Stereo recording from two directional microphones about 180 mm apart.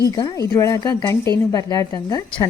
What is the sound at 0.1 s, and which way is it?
A woman's voice, 20° left (ahead or behind).